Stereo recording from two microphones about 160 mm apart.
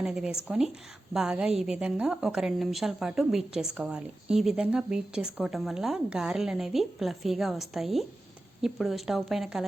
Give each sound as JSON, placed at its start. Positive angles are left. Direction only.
{"t": 0.0, "sound": "a woman's voice", "side_deg": -5}